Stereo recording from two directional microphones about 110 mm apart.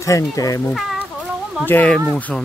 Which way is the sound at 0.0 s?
30° left (ahead or behind).